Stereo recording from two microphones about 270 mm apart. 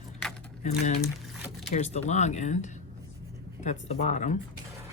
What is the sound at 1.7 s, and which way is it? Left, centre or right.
Speech, left.